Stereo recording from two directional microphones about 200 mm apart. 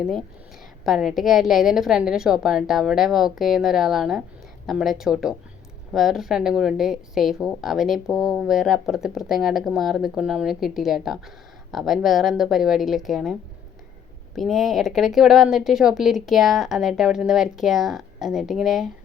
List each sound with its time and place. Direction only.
0.0 s a woman's voice: centre (ahead or behind)
14.3 s a woman's voice: centre (ahead or behind)